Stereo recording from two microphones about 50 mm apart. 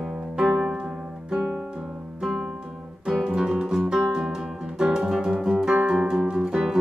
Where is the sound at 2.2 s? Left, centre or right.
Centre.